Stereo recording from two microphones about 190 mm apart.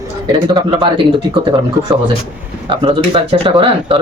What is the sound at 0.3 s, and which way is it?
Speech, 20° right (ahead or behind).